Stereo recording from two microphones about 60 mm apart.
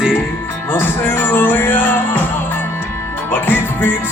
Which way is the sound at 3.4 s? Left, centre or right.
Left.